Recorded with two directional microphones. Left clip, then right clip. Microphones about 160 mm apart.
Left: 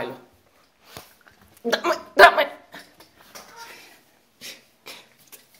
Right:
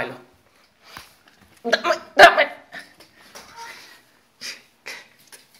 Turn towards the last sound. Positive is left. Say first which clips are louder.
# right 5 dB
turn(degrees=20)  # may be behind; listen again after turning